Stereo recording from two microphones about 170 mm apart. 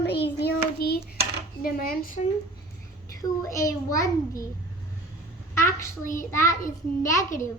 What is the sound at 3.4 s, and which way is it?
A child's voice, 20° left (ahead or behind).